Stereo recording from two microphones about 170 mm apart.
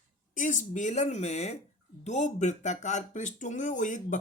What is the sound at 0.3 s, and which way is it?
Speech, 45° left (ahead or behind).